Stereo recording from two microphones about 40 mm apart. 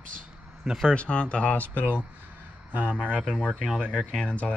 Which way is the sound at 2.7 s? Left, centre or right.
Right.